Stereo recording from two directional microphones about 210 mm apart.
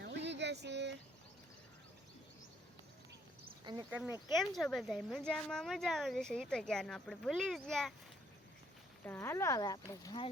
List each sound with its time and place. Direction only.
0.0 s a sound: 55° right (ahead or behind)
3.8 s speech: 5° right (ahead or behind)
9.0 s speech: 10° left (ahead or behind)